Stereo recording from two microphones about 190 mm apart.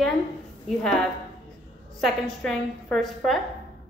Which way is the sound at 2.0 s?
Centre (ahead or behind).